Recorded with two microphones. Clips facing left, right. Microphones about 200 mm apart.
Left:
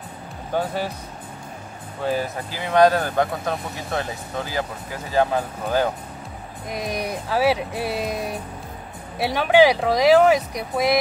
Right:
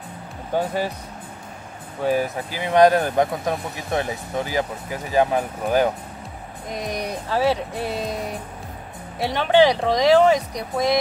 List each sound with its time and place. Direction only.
2.0 s speech: 15° right (ahead or behind)
6.7 s speech: 5° left (ahead or behind)
9.2 s speech: 10° left (ahead or behind)